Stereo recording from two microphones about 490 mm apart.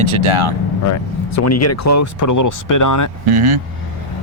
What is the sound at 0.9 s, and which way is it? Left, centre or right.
Speech, left.